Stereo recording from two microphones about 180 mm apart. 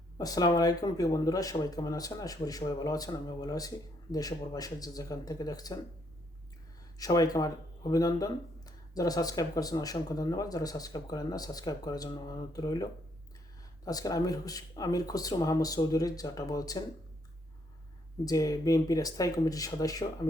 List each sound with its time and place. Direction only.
0.2 s speech: 20° left (ahead or behind)
7.0 s speech: 20° left (ahead or behind)
18.3 s speech: 20° left (ahead or behind)